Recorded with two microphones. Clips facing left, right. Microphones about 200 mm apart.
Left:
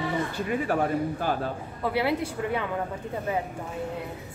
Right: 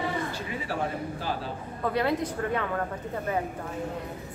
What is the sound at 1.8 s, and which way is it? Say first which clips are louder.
A woman's voice: even; 10° left (ahead or behind).